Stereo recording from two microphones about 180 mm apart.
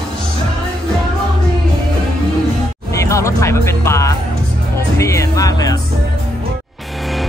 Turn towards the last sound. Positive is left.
turn(degrees=20)  # may be behind; listen again after turning